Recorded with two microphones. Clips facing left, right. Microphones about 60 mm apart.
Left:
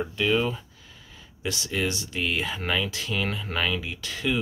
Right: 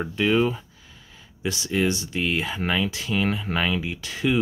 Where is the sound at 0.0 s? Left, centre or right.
Right.